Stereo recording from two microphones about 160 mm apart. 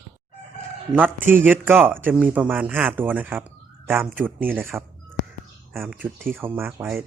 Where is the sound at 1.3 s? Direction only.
10° right (ahead or behind).